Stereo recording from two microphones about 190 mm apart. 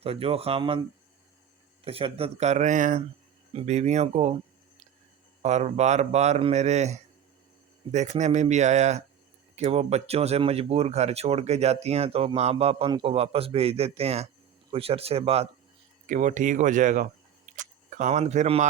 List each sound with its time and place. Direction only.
0.0 s speech: 30° right (ahead or behind)
1.8 s speech: 30° right (ahead or behind)
5.4 s speech: 35° right (ahead or behind)
16.0 s speech: 40° right (ahead or behind)